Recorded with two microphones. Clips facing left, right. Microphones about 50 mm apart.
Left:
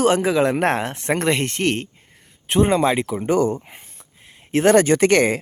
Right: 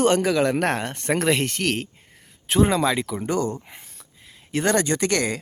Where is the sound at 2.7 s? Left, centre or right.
Left.